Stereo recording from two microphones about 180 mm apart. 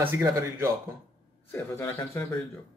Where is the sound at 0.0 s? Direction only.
15° right (ahead or behind).